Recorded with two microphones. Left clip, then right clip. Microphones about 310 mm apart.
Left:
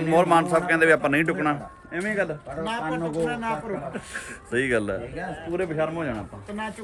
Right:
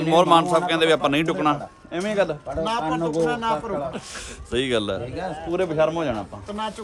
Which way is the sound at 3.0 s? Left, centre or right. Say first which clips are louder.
Right 5 dB; right.